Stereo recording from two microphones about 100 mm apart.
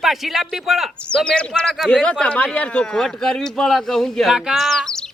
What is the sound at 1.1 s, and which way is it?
Speech, 10° left (ahead or behind).